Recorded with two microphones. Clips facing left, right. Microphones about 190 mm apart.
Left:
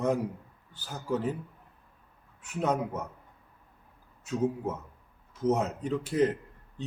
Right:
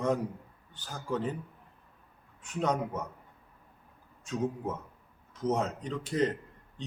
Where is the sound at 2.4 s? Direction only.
10° left (ahead or behind).